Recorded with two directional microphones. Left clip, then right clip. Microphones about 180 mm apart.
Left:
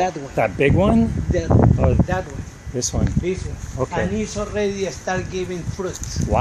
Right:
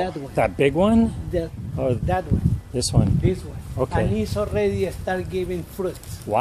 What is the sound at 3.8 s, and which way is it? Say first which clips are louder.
Speech: even; 20° right (ahead or behind).